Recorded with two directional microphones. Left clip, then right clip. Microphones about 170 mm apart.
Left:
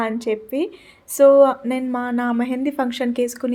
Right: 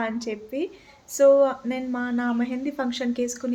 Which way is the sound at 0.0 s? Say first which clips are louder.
Left 6 dB; 35° left (ahead or behind).